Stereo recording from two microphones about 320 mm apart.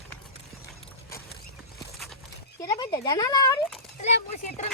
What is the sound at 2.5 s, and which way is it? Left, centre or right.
Speech, centre.